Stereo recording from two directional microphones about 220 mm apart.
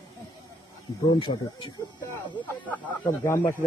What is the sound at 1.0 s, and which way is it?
Speech, 20° left (ahead or behind).